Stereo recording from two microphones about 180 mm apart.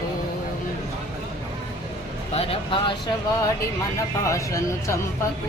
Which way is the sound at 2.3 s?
35° left (ahead or behind).